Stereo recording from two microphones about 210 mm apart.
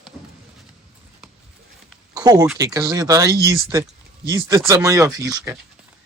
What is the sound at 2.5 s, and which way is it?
Speech, 15° right (ahead or behind).